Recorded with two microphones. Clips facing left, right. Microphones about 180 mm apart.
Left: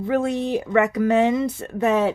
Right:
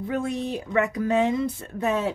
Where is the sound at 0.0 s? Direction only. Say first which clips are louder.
Left 5 dB; 80° left.